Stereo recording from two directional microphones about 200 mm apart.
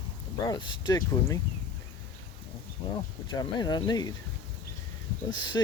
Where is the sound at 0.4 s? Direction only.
20° left (ahead or behind).